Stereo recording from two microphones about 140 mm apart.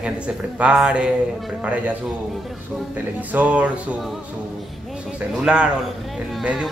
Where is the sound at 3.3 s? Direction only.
10° right (ahead or behind).